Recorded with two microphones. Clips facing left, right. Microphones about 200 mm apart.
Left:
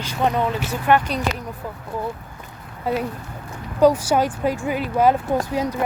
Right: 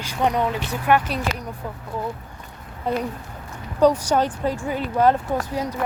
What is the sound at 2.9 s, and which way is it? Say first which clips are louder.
Speech: left 1 dB; 5° left (ahead or behind).